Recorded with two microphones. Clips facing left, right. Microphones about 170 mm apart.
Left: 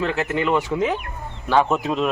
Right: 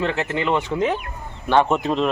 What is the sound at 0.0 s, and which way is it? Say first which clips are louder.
Speech: left 1 dB; 5° left (ahead or behind).